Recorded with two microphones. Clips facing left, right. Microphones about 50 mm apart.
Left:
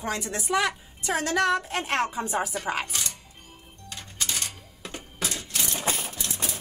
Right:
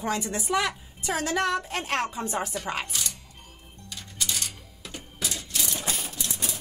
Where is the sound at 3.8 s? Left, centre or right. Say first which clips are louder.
Even; left.